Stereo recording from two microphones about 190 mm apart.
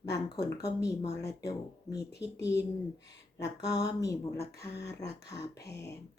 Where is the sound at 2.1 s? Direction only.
65° left (ahead or behind).